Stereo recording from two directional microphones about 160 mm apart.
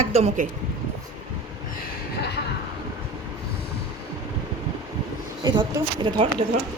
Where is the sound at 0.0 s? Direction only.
45° right (ahead or behind).